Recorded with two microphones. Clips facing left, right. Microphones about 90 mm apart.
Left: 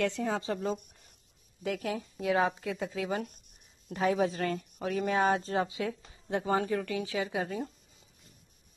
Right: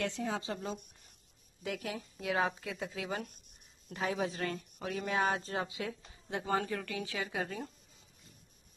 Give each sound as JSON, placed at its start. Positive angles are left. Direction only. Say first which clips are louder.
{"t": 0.2, "sound": "speech", "louder": "left 5 dB", "side_deg": 40}